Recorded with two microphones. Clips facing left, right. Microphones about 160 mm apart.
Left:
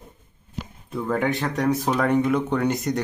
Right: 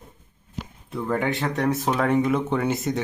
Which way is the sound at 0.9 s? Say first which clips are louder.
Left 1 dB; centre (ahead or behind).